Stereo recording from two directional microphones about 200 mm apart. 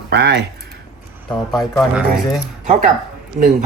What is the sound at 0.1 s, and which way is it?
Speech, 55° right (ahead or behind).